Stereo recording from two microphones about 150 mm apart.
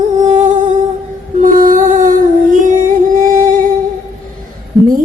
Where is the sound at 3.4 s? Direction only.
65° right (ahead or behind).